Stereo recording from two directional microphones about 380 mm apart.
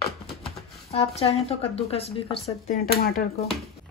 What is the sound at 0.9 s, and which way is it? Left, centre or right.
Speech, centre.